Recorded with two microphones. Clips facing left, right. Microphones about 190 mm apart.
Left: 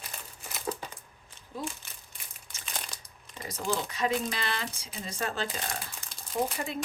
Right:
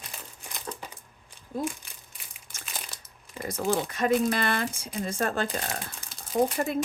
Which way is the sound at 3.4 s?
55° right (ahead or behind).